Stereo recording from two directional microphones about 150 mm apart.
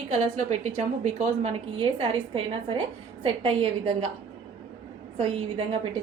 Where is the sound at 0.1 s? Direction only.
50° right (ahead or behind).